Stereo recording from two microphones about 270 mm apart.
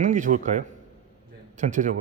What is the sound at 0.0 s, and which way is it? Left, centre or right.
Speech, right.